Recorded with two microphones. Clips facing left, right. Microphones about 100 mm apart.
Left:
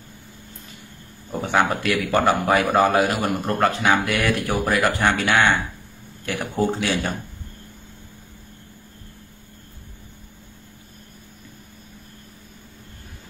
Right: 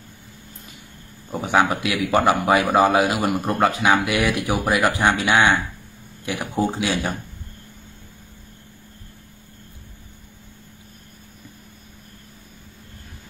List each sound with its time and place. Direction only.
1.3 s a man's voice: 10° right (ahead or behind)